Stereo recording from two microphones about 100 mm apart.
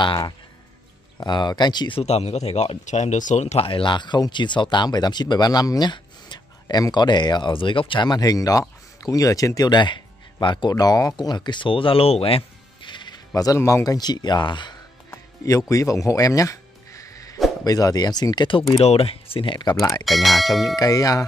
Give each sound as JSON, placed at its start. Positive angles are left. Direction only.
{"t": 0.0, "sound": "speech", "side_deg": 50}
{"t": 2.0, "sound": "speech", "side_deg": 90}
{"t": 3.4, "sound": "speech", "side_deg": 75}
{"t": 10.4, "sound": "speech", "side_deg": 50}
{"t": 13.3, "sound": "speech", "side_deg": 35}
{"t": 13.8, "sound": "speech", "side_deg": 45}
{"t": 15.0, "sound": "music", "side_deg": 35}
{"t": 17.6, "sound": "speech", "side_deg": 40}
{"t": 18.8, "sound": "speech", "side_deg": 75}
{"t": 19.8, "sound": "speech", "side_deg": 35}
{"t": 20.1, "sound": "speech", "side_deg": 0}
{"t": 20.7, "sound": "speech", "side_deg": 40}